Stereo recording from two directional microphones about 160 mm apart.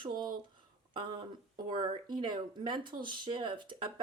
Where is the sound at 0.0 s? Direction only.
25° right (ahead or behind).